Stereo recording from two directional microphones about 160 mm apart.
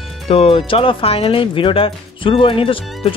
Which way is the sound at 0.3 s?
35° left (ahead or behind).